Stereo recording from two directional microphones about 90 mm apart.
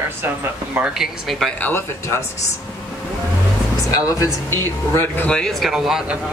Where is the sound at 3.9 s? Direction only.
35° left (ahead or behind).